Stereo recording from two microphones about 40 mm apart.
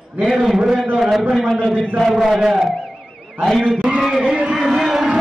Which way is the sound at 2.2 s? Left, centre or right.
Centre.